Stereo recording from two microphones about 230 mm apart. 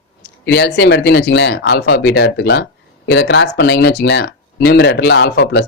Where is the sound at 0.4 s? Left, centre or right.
Left.